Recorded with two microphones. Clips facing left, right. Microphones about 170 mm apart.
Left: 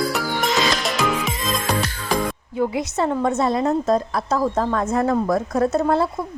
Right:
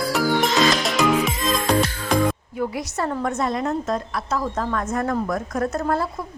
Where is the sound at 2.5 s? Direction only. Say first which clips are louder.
Left 4 dB; 25° left (ahead or behind).